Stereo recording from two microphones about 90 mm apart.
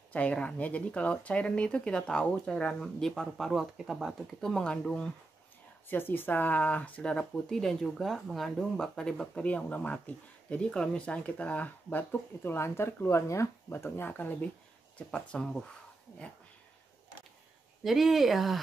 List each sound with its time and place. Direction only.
0.1 s speech: 15° left (ahead or behind)
5.9 s speech: 25° left (ahead or behind)
15.0 s speech: 10° left (ahead or behind)
17.8 s speech: centre (ahead or behind)